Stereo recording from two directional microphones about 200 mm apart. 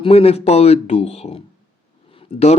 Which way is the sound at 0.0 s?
30° left (ahead or behind).